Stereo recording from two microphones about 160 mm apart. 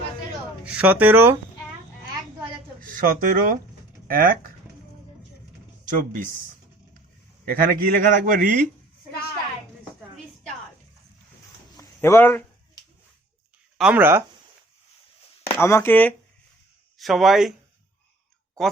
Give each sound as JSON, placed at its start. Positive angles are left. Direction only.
{"t": 0.6, "sound": "speech", "side_deg": -10}
{"t": 2.8, "sound": "a man's voice", "side_deg": -60}
{"t": 7.4, "sound": "a man's voice", "side_deg": -65}
{"t": 11.8, "sound": "a sound", "side_deg": 15}
{"t": 13.7, "sound": "speech", "side_deg": -5}
{"t": 15.5, "sound": "speech", "side_deg": 15}
{"t": 17.0, "sound": "speech", "side_deg": 0}